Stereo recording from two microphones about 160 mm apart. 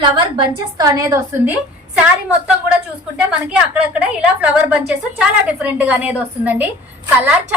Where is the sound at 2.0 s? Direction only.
5° right (ahead or behind).